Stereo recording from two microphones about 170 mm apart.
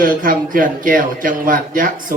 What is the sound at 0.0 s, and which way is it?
A man's voice, 55° right (ahead or behind).